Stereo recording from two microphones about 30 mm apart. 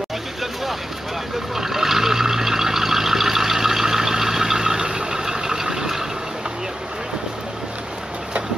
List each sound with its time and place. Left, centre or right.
1.5 s vehicle: centre
4.8 s vehicle: right
5.2 s vehicle: centre